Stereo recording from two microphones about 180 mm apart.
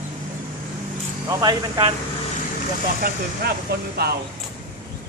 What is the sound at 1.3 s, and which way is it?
Speech, 20° right (ahead or behind).